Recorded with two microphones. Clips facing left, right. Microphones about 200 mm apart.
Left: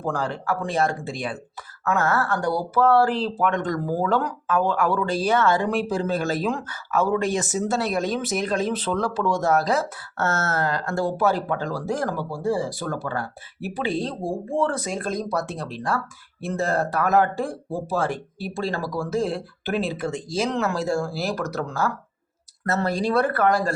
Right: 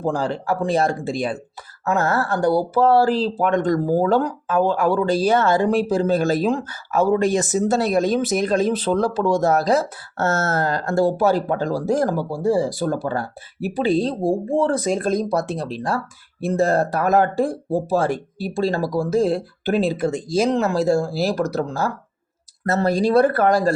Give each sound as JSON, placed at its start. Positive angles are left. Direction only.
{"t": 0.0, "sound": "speech", "side_deg": -30}